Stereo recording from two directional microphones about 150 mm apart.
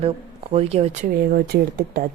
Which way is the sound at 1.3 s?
80° right.